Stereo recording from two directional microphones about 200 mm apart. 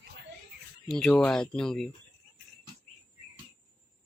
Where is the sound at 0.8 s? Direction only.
5° left (ahead or behind).